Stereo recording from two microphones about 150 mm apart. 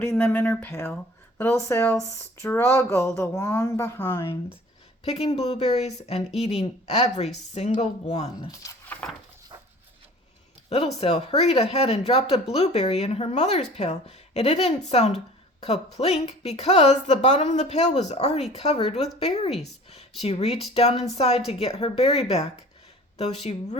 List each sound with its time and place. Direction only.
0.0 s speech: 15° left (ahead or behind)
5.0 s speech: 40° left (ahead or behind)
8.9 s dog: 10° left (ahead or behind)
10.7 s speech: 45° left (ahead or behind)